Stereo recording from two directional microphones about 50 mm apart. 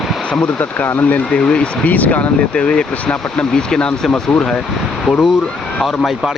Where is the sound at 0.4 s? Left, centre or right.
Left.